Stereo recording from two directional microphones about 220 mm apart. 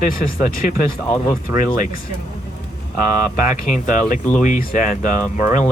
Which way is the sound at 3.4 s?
35° left (ahead or behind).